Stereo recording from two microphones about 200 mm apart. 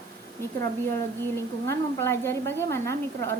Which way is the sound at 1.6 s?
10° left (ahead or behind).